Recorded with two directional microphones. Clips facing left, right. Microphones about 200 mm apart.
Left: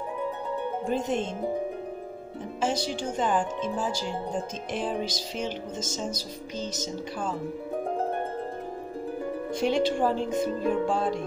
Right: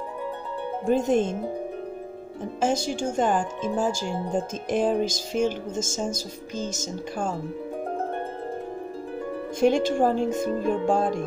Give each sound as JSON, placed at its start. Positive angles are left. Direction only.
{"t": 0.8, "sound": "speech", "side_deg": -50}
{"t": 2.6, "sound": "speech", "side_deg": -45}
{"t": 9.6, "sound": "speech", "side_deg": -45}